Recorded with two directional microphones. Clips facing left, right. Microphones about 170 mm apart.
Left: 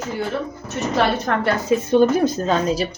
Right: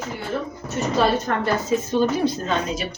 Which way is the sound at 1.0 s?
65° left (ahead or behind).